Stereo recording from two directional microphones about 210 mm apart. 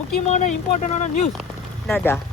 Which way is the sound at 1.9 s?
10° left (ahead or behind).